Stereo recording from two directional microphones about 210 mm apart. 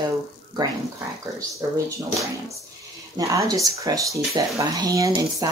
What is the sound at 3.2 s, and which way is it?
Speech, 15° right (ahead or behind).